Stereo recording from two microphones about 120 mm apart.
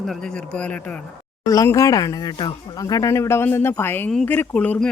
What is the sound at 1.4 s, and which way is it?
Speech, 25° left (ahead or behind).